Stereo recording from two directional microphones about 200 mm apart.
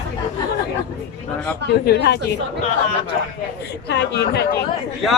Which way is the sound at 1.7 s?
55° left (ahead or behind).